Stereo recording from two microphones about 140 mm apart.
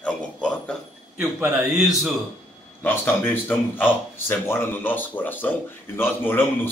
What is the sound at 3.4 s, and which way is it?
A man's voice, 15° left (ahead or behind).